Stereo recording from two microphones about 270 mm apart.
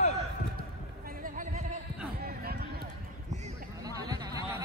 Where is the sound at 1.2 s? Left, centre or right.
Right.